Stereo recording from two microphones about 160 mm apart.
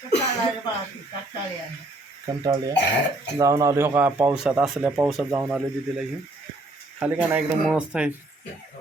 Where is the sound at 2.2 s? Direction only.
25° right (ahead or behind); by 8.1 s 5° right (ahead or behind).